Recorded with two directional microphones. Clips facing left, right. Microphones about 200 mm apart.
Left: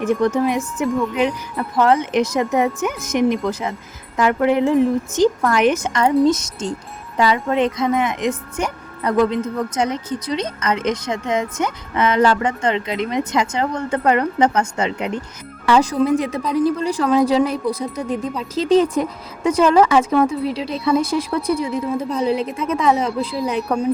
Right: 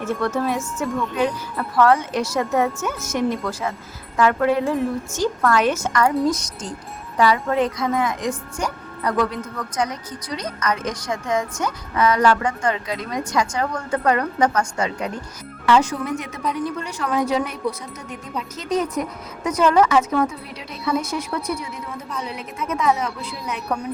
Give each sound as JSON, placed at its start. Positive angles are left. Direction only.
{"t": 0.0, "sound": "a woman's voice", "side_deg": 15}
{"t": 15.6, "sound": "speech", "side_deg": 35}